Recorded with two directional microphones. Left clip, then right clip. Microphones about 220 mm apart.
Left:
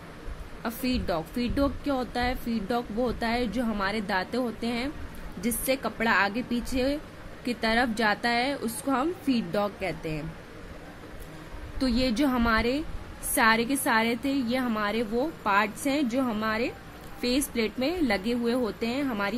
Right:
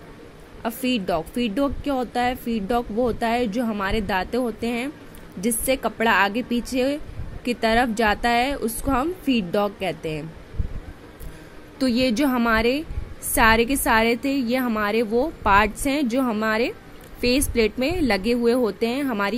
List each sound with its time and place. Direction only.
0.6 s a woman's voice: 15° right (ahead or behind)
11.8 s a woman's voice: 15° right (ahead or behind)